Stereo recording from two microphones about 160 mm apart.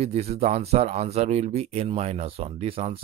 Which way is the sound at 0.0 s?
40° right (ahead or behind).